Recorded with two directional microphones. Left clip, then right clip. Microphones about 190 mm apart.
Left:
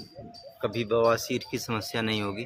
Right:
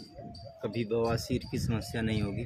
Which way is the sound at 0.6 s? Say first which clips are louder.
Left 7 dB; 15° right (ahead or behind).